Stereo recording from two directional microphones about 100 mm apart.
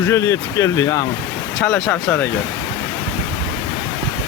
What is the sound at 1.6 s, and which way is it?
Speech, 10° left (ahead or behind).